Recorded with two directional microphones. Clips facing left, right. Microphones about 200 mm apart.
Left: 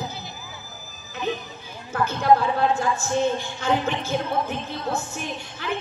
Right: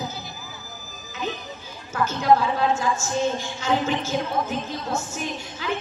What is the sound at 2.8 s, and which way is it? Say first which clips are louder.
Speech: left 1 dB; 60° left (ahead or behind).